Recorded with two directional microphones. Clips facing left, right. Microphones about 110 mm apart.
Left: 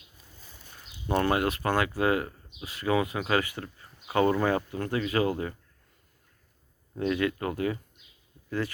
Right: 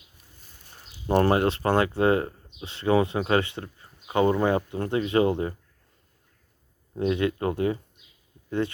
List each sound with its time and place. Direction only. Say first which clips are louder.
1.0 s speech: right 5 dB; 35° right (ahead or behind)
6.9 s speech: right 3 dB; 25° right (ahead or behind)